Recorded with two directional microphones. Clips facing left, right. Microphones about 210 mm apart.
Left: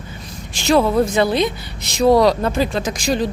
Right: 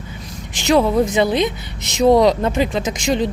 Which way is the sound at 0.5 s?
15° right (ahead or behind).